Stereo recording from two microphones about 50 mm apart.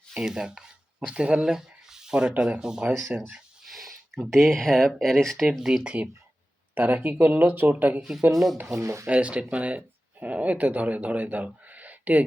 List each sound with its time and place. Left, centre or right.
0.2 s speech: centre
3.1 s speech: right
3.6 s a sound: centre
4.3 s speech: centre
5.5 s speech: centre
6.7 s speech: right
8.7 s speech: right
9.0 s speech: right
11.6 s a sound: right